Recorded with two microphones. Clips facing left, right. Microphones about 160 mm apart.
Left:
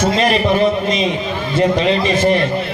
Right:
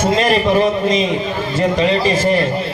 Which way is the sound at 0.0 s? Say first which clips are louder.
Even; 45° right (ahead or behind).